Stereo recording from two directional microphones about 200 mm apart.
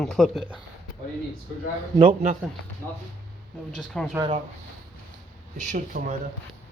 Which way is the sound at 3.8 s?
5° left (ahead or behind).